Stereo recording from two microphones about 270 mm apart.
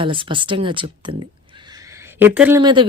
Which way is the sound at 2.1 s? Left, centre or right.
Centre.